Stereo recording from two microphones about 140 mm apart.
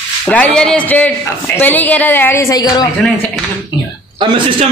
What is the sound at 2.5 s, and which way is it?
Speech, 25° left (ahead or behind).